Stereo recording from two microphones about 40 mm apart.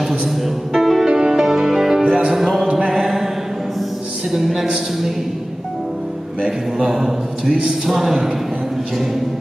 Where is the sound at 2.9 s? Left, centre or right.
Centre.